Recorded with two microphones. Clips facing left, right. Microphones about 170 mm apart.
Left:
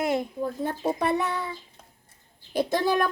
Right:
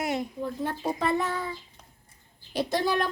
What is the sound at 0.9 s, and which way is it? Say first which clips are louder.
Child singing: left 1 dB; 65° left (ahead or behind).